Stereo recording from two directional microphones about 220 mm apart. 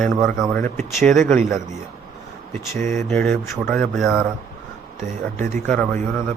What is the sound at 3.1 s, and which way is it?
Speech, 10° left (ahead or behind).